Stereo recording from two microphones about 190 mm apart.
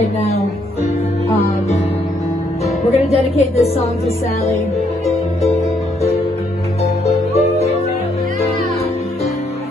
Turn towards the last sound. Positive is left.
turn(degrees=35)  # may be behind; listen again after turning